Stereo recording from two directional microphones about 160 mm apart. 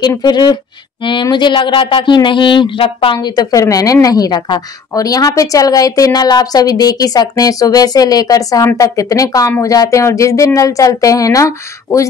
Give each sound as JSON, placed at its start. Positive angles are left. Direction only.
{"t": 0.0, "sound": "speech", "side_deg": 25}